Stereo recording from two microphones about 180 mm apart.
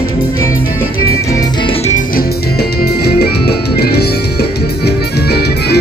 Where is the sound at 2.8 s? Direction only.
60° left (ahead or behind).